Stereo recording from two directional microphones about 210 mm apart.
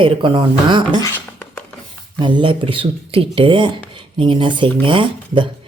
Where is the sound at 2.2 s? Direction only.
20° right (ahead or behind).